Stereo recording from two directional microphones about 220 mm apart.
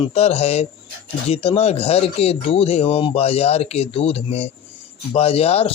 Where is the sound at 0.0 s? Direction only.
30° left (ahead or behind).